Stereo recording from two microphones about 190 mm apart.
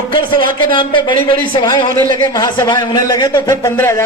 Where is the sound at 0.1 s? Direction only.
25° left (ahead or behind).